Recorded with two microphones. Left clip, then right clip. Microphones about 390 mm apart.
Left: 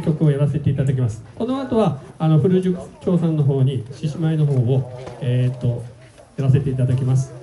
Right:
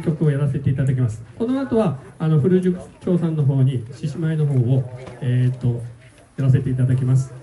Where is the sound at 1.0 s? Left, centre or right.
Centre.